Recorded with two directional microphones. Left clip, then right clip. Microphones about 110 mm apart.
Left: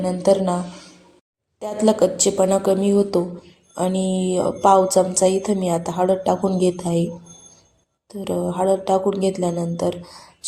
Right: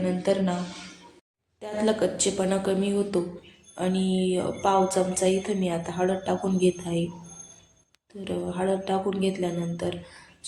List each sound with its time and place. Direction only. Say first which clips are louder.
0.0 s speech: left 8 dB; 45° left (ahead or behind)
1.5 s speech: left 7 dB; 50° left (ahead or behind)
8.2 s speech: left 8 dB; 45° left (ahead or behind)